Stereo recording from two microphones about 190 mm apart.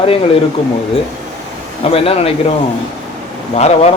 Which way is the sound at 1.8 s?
30° left (ahead or behind).